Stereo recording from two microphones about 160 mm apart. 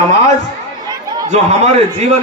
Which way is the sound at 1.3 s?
45° right (ahead or behind).